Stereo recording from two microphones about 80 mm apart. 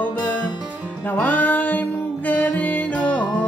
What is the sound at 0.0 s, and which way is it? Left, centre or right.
Music, left.